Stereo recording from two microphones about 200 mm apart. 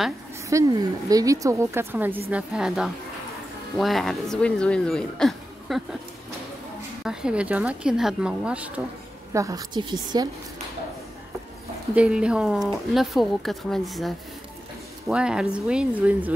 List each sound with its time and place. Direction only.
0.5 s a woman's voice: 15° right (ahead or behind); by 5.8 s centre (ahead or behind)
7.1 s speech: 5° right (ahead or behind)
9.3 s a woman's voice: 15° right (ahead or behind)
11.9 s speech: 5° right (ahead or behind)